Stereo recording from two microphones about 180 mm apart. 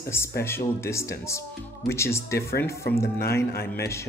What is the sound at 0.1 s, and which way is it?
Speech, 15° left (ahead or behind).